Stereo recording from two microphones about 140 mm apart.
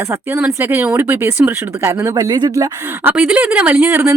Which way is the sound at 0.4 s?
15° right (ahead or behind).